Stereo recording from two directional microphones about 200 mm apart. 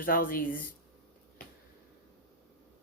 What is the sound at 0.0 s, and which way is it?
Speech, 45° left (ahead or behind).